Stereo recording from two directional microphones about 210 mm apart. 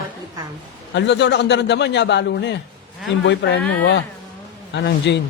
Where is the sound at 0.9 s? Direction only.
55° left (ahead or behind).